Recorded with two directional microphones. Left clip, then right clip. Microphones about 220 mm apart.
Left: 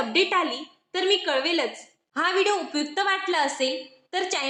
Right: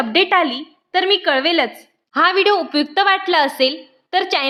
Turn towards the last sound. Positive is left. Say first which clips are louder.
# right 9 dB
turn(degrees=-40)  # may be behind; listen again after turning